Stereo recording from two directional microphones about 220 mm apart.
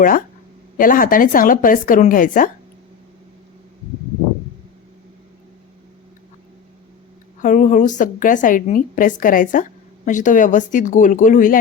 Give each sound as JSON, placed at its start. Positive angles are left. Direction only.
{"t": 0.8, "sound": "a woman's voice", "side_deg": 40}
{"t": 7.4, "sound": "a woman's voice", "side_deg": 35}